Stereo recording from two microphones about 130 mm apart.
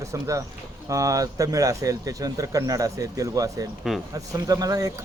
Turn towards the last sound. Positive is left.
turn(degrees=-30)  # may be behind; listen again after turning